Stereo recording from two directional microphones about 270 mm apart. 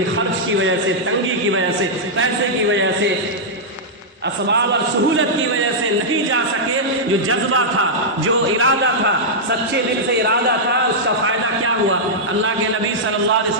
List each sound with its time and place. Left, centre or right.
4.4 s a man's voice: right
8.5 s a man's voice: right
11.3 s a man's voice: right